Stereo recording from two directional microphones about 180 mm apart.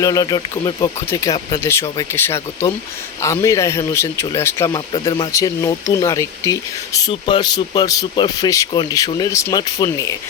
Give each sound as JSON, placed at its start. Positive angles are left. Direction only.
{"t": 0.0, "sound": "speech", "side_deg": 20}